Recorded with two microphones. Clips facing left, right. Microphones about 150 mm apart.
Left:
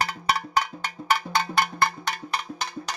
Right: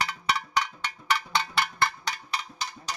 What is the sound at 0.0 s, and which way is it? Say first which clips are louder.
Cowbell: left 3 dB; 40° left (ahead or behind).